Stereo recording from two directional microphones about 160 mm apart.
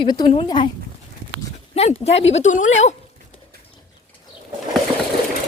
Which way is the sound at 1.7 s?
40° left (ahead or behind).